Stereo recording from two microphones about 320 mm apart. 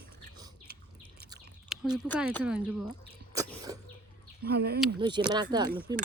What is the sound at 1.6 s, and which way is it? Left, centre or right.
Speech, centre.